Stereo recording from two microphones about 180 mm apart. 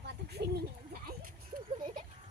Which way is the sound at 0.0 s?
65° right (ahead or behind).